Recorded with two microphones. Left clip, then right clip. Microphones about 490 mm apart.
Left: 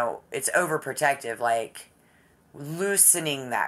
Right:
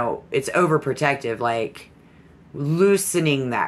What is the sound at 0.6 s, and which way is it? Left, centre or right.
Speech, centre.